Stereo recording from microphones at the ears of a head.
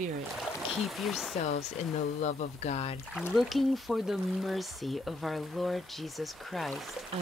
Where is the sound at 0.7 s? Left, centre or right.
Left.